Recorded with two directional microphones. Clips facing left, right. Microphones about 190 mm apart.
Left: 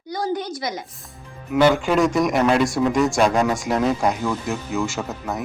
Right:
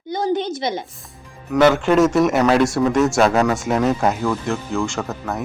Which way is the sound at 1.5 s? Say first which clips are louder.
Right 3 dB; 5° left (ahead or behind).